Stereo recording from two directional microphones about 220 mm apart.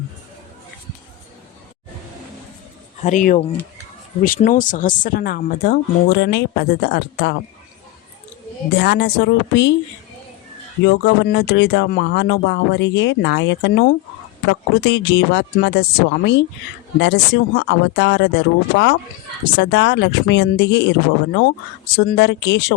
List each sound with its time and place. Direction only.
3.0 s speech: 35° left (ahead or behind)
8.7 s speech: 50° left (ahead or behind)
10.8 s speech: 55° left (ahead or behind)
21.9 s speech: 50° left (ahead or behind)